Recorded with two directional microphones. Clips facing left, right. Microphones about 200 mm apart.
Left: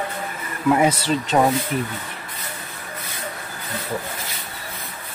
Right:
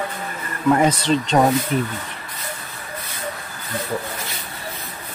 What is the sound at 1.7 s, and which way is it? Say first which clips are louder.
Speech: right 3 dB; 30° right (ahead or behind).